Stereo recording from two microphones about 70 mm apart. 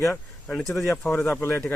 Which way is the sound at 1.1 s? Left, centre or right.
Left.